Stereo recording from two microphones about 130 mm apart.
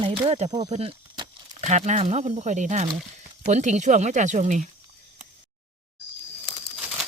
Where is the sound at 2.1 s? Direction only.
65° right (ahead or behind).